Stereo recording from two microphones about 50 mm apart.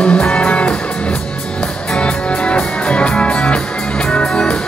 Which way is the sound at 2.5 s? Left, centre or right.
Left.